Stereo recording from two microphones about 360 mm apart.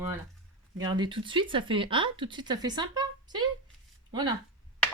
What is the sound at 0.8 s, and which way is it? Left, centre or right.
Speech, centre.